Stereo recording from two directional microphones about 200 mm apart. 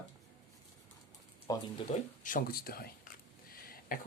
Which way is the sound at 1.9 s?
40° left (ahead or behind).